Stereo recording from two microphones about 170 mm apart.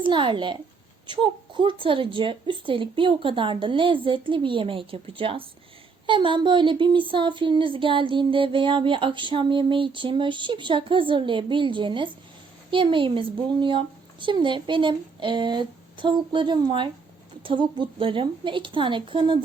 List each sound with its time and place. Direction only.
0.0 s speech: 30° right (ahead or behind)